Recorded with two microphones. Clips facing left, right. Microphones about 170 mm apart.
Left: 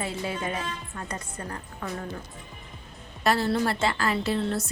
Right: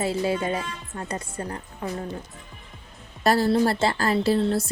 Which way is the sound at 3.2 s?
35° right (ahead or behind).